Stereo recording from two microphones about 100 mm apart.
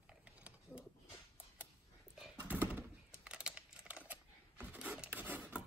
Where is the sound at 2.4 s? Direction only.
20° right (ahead or behind).